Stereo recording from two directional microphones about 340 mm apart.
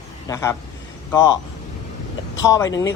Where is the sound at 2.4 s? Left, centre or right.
Centre.